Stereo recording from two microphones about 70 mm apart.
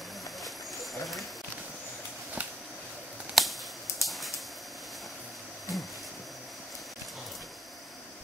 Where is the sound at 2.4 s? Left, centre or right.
Right.